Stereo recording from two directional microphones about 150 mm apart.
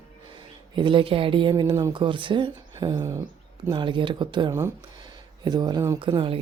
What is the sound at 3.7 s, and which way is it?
Speech, 30° right (ahead or behind).